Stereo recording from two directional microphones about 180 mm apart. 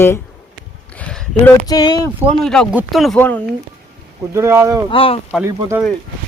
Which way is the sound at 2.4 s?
5° left (ahead or behind).